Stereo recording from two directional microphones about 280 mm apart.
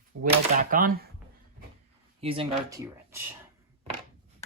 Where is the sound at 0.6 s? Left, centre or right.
Right.